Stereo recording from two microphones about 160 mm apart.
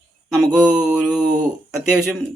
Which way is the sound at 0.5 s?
5° right (ahead or behind).